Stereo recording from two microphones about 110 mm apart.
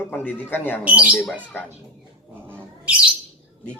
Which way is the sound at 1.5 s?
15° left (ahead or behind).